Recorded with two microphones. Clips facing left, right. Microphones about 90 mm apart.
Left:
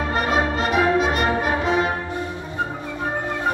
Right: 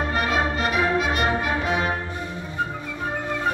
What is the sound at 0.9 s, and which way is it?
Brass instrument, 40° left (ahead or behind).